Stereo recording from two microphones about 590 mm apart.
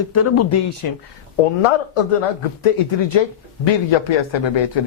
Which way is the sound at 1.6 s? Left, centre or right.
Left.